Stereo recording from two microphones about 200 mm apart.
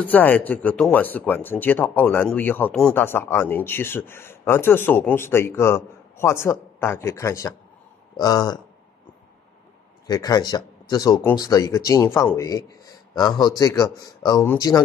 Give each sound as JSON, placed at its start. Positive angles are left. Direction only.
{"t": 0.0, "sound": "speech", "side_deg": 10}
{"t": 10.0, "sound": "speech", "side_deg": 20}